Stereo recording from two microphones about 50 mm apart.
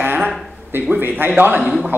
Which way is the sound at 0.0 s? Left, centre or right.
Right.